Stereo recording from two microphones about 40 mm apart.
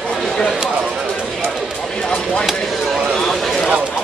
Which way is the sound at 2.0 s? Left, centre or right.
Centre.